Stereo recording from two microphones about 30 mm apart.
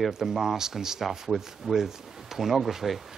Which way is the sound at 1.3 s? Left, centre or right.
Centre.